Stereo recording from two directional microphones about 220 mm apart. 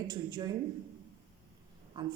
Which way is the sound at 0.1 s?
20° right (ahead or behind).